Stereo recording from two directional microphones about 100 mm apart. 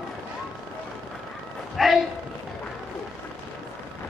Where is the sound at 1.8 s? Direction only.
Centre (ahead or behind).